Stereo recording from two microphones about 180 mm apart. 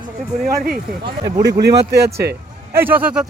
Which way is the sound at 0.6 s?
60° right (ahead or behind).